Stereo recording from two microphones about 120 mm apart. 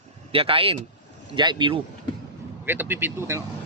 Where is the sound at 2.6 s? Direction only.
20° right (ahead or behind).